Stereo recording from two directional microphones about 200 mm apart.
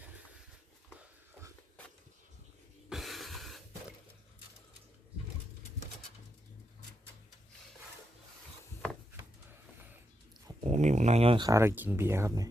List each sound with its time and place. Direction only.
2.9 s a sound: centre (ahead or behind)
10.6 s speech: 35° right (ahead or behind)
11.4 s speech: 15° right (ahead or behind)